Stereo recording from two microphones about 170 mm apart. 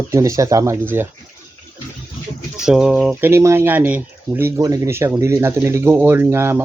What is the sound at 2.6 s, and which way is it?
Speech, 5° right (ahead or behind).